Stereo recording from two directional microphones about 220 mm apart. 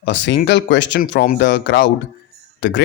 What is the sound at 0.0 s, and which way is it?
Speech, 55° left (ahead or behind).